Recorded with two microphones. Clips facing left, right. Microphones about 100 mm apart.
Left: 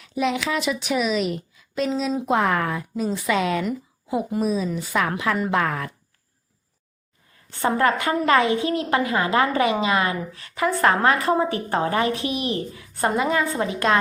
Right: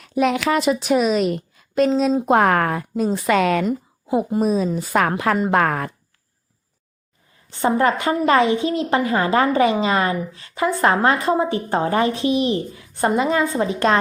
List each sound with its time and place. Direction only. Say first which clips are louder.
0.0 s speech: right 5 dB; 50° right (ahead or behind)
3.3 s a woman's voice: right 5 dB; 60° right (ahead or behind)
4.3 s speech: right 3 dB; 40° right (ahead or behind)
7.5 s a woman's voice: right 2 dB; 20° right (ahead or behind)